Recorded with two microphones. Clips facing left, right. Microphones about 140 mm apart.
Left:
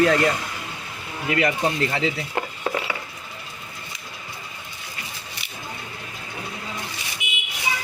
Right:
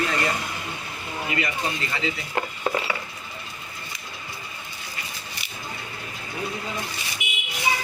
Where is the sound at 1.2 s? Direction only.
75° left (ahead or behind).